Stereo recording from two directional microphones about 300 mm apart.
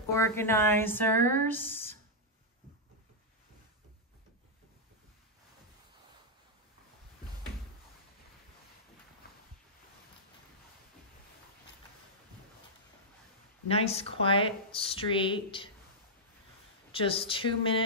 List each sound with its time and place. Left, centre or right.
0.1 s speech: centre
13.7 s speech: centre
16.9 s speech: centre